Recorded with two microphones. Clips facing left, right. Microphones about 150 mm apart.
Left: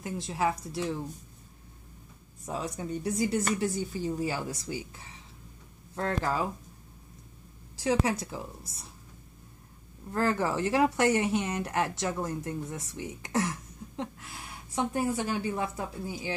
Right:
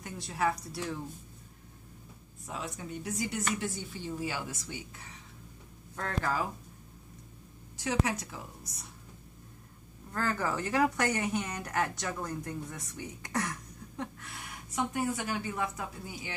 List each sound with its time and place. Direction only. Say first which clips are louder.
0.0 s speech: left 2 dB; 25° left (ahead or behind)
2.4 s speech: left 5 dB; 40° left (ahead or behind)
5.9 s speech: left 3 dB; 25° left (ahead or behind)
7.7 s speech: left 4 dB; 30° left (ahead or behind)
10.1 s speech: left 4 dB; 25° left (ahead or behind)